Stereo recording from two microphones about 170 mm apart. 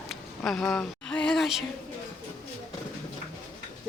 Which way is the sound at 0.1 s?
Centre (ahead or behind).